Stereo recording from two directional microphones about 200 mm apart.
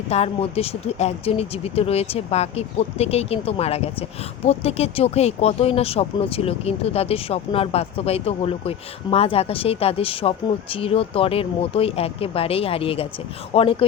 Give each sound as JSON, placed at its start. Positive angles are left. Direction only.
{"t": 0.1, "sound": "speech", "side_deg": 30}